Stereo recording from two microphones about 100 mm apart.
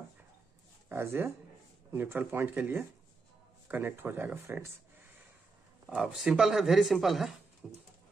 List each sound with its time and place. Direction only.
0.8 s speech: 25° right (ahead or behind)
5.9 s speech: 10° right (ahead or behind)
7.6 s a sound: 10° right (ahead or behind)